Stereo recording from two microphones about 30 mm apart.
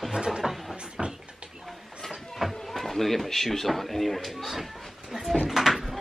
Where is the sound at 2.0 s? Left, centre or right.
Centre.